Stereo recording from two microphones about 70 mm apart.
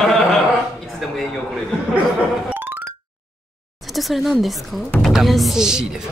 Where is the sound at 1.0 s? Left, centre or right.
Centre.